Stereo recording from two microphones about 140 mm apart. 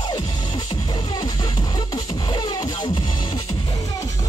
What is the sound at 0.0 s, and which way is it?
Music, 30° left (ahead or behind).